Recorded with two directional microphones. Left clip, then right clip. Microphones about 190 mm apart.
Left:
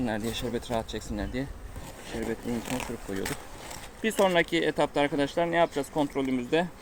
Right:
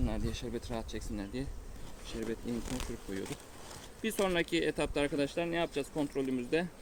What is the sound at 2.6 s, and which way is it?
Speech, 30° left (ahead or behind).